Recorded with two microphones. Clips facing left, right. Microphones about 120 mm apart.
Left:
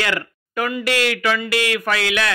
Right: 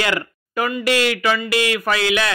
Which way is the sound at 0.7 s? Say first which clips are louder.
Right 2 dB; 5° right (ahead or behind).